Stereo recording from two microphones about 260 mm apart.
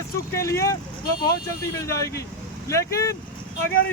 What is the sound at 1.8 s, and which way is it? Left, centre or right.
Speech, centre.